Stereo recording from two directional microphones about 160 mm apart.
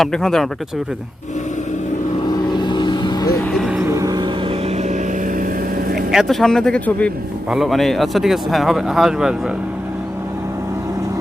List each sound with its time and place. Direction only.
0.0 s speech: 5° left (ahead or behind)
2.5 s vehicle: 30° left (ahead or behind)
3.5 s vehicle: centre (ahead or behind)
3.8 s vehicle: 20° right (ahead or behind)
6.1 s speech: centre (ahead or behind)